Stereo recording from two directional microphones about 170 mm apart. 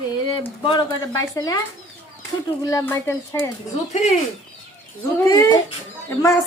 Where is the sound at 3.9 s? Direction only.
40° left (ahead or behind).